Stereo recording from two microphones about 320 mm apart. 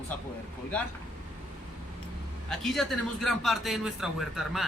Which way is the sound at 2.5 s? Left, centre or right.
Centre.